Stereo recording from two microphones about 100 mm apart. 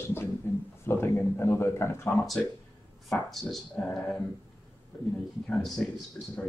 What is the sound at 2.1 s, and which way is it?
Speech, centre (ahead or behind).